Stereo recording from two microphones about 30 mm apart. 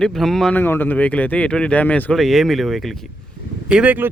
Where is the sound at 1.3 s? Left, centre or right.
Left.